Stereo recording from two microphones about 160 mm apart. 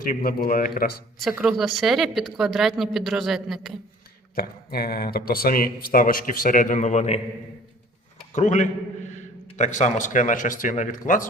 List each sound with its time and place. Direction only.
0.0 s speech: 60° left (ahead or behind)
1.2 s speech: 5° right (ahead or behind)
4.4 s speech: 70° left (ahead or behind); by 7.2 s 45° left (ahead or behind)
8.3 s a man's voice: 50° left (ahead or behind)